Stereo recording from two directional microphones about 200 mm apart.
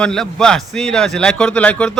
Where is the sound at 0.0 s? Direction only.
5° left (ahead or behind).